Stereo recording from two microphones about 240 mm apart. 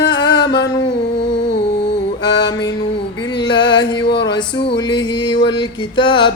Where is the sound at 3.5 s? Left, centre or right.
Centre.